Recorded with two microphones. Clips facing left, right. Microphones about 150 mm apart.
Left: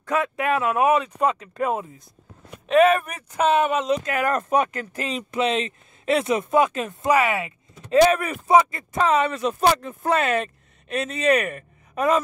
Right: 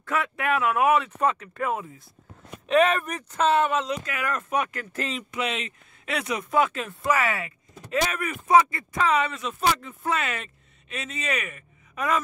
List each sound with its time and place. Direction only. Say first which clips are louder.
0.0 s speech: left 4 dB; 20° left (ahead or behind)
2.6 s speech: left 4 dB; centre (ahead or behind); by 4.1 s 20° left (ahead or behind)
4.1 s speech: left 6 dB; 40° left (ahead or behind); by 5.1 s 15° left (ahead or behind)
5.1 s speech: left 9 dB; 30° left (ahead or behind)
7.9 s speech: left 10 dB; 30° left (ahead or behind)